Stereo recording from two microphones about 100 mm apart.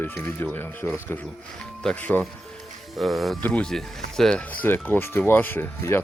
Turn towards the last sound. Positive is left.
turn(degrees=25)  # may be behind; listen again after turning